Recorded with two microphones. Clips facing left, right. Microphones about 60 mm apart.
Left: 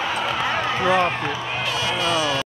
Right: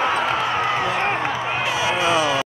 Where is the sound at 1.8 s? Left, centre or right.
Right.